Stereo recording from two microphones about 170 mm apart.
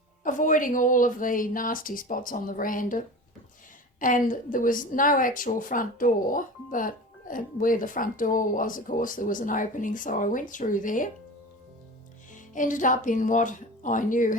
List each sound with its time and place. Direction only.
0.3 s a woman's voice: 50° left (ahead or behind)
4.0 s a woman's voice: 50° left (ahead or behind)
12.5 s a woman's voice: 50° left (ahead or behind)